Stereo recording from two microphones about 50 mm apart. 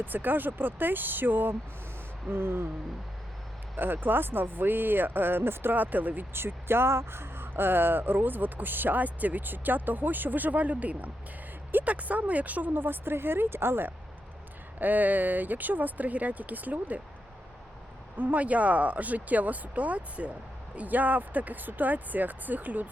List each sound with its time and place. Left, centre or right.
0.0 s speech: right
3.8 s speech: right
6.3 s speech: right
14.8 s speech: right
18.2 s speech: right